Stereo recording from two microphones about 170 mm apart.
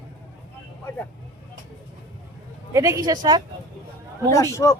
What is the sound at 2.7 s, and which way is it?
Speech, 20° right (ahead or behind).